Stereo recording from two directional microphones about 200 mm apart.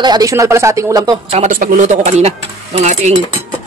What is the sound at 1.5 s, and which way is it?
Speech, 45° right (ahead or behind).